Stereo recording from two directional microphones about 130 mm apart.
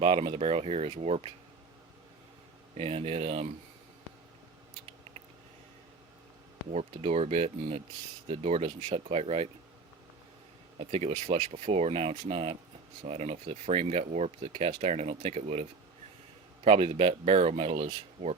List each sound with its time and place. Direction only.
0.0 s speech: 45° right (ahead or behind)
2.7 s speech: 50° right (ahead or behind)
6.7 s speech: 60° right (ahead or behind)
10.8 s speech: 50° right (ahead or behind)
11.5 s speech: 55° right (ahead or behind)
16.6 s speech: 45° right (ahead or behind)